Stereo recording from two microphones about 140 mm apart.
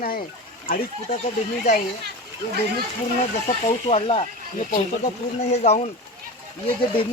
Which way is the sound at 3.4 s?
50° left (ahead or behind).